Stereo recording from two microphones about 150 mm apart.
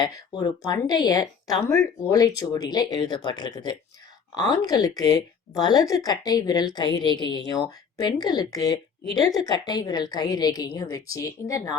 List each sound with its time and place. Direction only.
0.3 s a woman's voice: 30° left (ahead or behind)